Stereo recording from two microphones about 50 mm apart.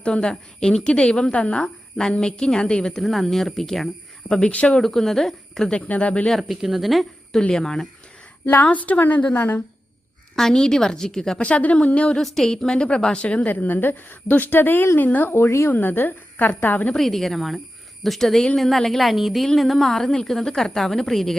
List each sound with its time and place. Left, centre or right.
0.0 s a woman's voice: centre
3.0 s a woman's voice: centre
4.3 s a woman's voice: centre
4.8 s a woman's voice: centre
5.7 s a woman's voice: left
6.5 s a woman's voice: centre
7.3 s a woman's voice: centre
8.4 s a woman's voice: left
10.3 s a woman's voice: centre
11.3 s a woman's voice: left
12.1 s a woman's voice: centre; by 15.3 s left
15.3 s a woman's voice: left
15.7 s a woman's voice: left
16.9 s a woman's voice: centre